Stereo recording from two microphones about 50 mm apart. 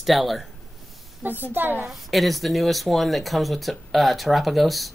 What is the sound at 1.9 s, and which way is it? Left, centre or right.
Speech, centre.